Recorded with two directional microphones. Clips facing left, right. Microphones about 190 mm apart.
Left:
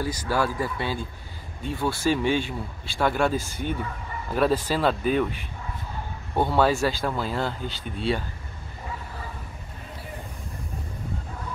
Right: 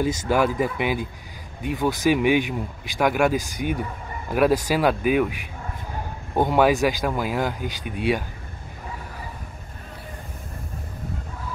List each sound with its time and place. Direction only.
0.0 s speech: 20° right (ahead or behind)